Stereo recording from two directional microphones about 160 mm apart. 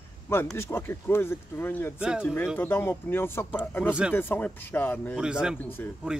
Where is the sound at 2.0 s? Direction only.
5° right (ahead or behind).